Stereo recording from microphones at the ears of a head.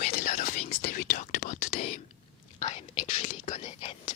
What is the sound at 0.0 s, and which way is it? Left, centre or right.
Whispering, left.